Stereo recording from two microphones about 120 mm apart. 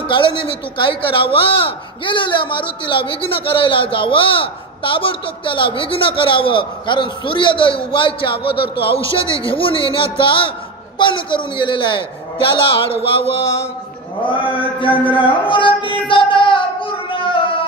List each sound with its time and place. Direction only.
0.1 s a man's voice: 45° left (ahead or behind)
14.2 s a man's voice: 45° left (ahead or behind)
16.1 s child singing: 45° left (ahead or behind)